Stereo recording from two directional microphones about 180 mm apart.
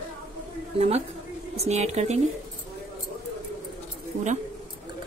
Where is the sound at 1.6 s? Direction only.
40° right (ahead or behind).